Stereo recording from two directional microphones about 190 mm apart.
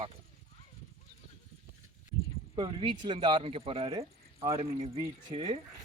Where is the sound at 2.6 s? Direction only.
25° right (ahead or behind).